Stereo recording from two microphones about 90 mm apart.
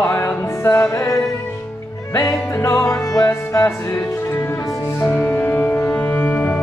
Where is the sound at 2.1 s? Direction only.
35° left (ahead or behind).